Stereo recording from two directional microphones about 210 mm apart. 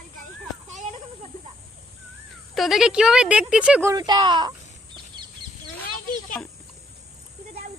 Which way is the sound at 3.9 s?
20° right (ahead or behind).